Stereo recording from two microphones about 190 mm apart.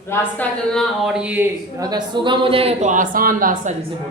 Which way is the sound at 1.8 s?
20° right (ahead or behind).